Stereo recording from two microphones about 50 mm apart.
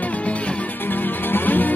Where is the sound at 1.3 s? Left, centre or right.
Left.